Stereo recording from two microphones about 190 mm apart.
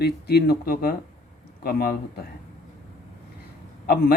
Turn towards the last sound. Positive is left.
turn(degrees=55)  # may be behind; listen again after turning